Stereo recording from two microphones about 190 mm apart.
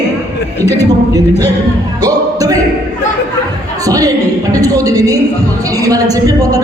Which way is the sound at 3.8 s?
20° right (ahead or behind).